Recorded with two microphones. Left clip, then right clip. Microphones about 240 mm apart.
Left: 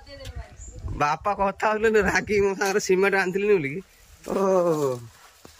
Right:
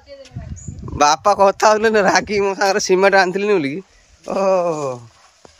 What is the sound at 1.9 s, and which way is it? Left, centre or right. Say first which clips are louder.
Speech: right 6 dB; centre.